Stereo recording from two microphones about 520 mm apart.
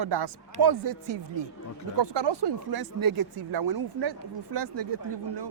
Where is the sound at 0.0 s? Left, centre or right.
Right.